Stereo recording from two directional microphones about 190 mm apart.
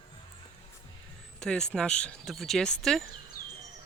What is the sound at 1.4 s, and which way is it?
Speech, 5° left (ahead or behind).